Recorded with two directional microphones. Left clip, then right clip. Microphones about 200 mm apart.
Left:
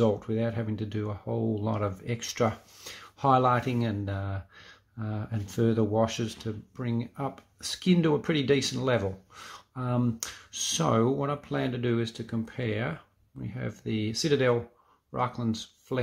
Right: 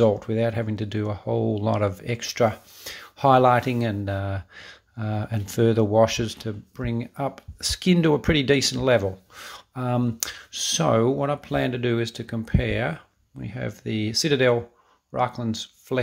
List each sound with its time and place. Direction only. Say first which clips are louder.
0.0 s speech: right 6 dB; 25° right (ahead or behind)